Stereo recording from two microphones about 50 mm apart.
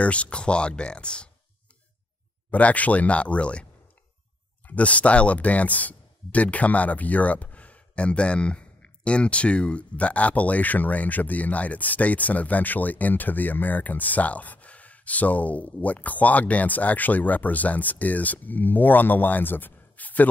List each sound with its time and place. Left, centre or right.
0.0 s speech: left
2.5 s speech: left
4.6 s speech: left